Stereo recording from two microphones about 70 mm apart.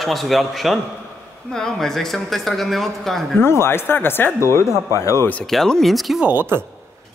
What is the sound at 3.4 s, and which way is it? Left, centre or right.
Speech, left.